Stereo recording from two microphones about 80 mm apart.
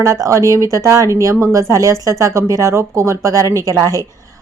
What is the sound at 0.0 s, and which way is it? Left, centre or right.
Speech, right.